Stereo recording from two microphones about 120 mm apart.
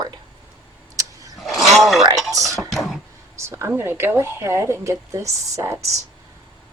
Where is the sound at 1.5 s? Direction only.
Centre (ahead or behind).